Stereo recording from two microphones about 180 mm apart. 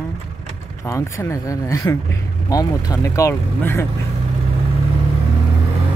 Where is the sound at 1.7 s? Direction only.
15° left (ahead or behind).